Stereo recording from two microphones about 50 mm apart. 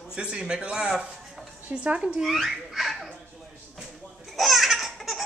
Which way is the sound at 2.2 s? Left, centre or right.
Centre.